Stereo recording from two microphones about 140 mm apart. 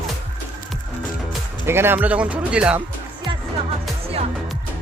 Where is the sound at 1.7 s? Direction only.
15° right (ahead or behind).